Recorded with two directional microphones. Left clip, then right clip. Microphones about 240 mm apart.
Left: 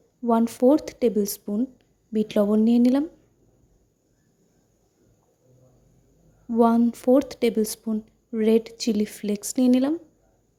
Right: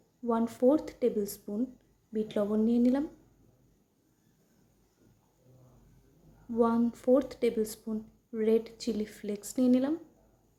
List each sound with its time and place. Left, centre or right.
0.3 s speech: left
6.5 s speech: left